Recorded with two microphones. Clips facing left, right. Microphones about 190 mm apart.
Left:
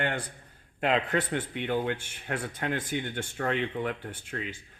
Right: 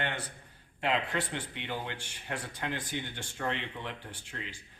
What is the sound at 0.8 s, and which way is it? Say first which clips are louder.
Speech: left 5 dB; 50° left (ahead or behind).